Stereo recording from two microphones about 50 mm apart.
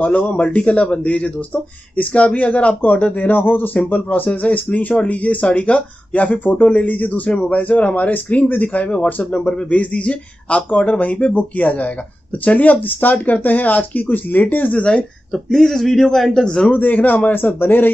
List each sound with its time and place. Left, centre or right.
0.0 s speech: left
14.8 s speech: left
15.3 s a man's voice: centre
16.7 s speech: left